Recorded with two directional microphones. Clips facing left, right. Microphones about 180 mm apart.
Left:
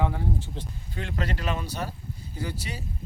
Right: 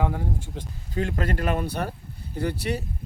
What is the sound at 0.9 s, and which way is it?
Speech, 45° right (ahead or behind).